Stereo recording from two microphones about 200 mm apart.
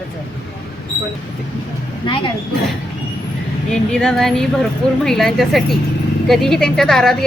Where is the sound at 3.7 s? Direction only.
5° left (ahead or behind).